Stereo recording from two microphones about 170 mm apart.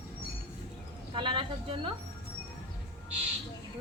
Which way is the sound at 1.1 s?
30° right (ahead or behind).